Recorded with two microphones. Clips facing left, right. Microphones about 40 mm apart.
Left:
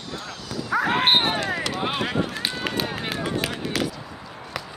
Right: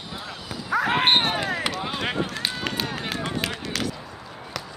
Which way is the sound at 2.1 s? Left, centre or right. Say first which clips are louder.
Left 1 dB; centre.